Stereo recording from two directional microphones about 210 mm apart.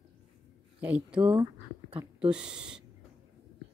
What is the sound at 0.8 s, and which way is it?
A woman's voice, 5° right (ahead or behind).